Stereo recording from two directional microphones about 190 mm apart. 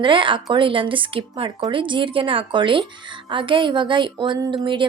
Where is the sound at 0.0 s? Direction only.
25° right (ahead or behind).